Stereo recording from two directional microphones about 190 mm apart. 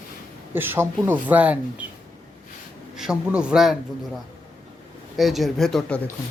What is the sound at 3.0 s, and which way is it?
Speech, 5° right (ahead or behind).